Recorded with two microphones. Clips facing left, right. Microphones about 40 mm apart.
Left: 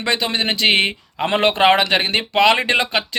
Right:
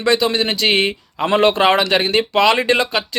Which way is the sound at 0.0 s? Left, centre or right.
Left.